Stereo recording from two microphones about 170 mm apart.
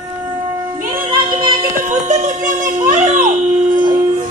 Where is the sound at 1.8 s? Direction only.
45° right (ahead or behind).